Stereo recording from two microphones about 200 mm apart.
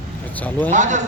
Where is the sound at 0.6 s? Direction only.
40° right (ahead or behind).